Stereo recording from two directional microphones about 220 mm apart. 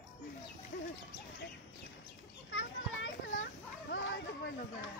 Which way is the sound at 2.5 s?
60° left (ahead or behind).